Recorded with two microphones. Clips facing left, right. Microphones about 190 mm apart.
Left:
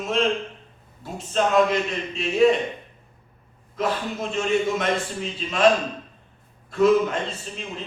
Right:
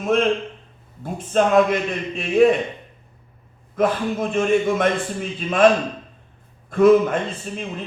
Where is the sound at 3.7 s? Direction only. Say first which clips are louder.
Right 6 dB; 55° right (ahead or behind).